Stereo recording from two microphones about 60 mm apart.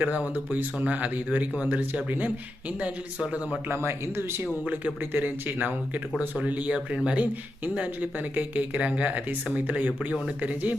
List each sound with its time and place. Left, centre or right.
0.0 s speech: right
3.7 s speech: right
6.7 s speech: centre